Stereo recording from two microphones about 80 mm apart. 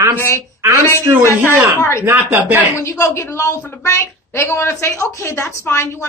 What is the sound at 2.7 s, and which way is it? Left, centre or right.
A woman's voice, left.